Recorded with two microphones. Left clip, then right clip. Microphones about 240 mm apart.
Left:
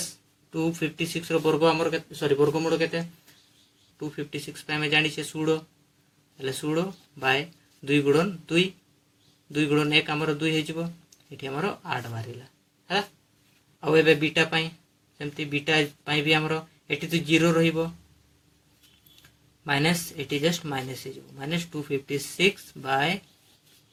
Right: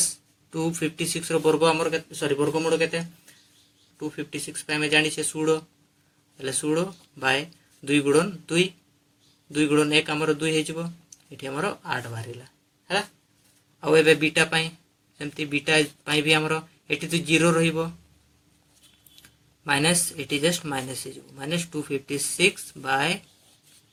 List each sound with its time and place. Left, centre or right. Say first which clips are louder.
0.5 s speech: right 1 dB; centre
13.8 s speech: right 2 dB; centre
19.6 s speech: right 2 dB; centre